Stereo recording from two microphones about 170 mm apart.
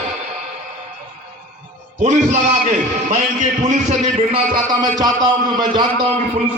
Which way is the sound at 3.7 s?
45° right (ahead or behind).